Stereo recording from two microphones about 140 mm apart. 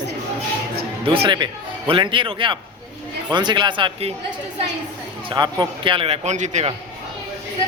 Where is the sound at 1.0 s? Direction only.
40° right (ahead or behind).